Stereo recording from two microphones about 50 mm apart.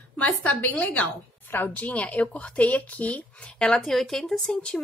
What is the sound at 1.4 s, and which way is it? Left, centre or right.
Speech, left.